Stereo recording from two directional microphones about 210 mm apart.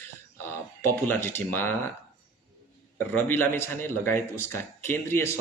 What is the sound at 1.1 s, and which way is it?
Speech, 10° left (ahead or behind).